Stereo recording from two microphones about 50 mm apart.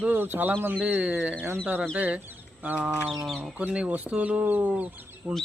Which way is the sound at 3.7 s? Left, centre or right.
Right.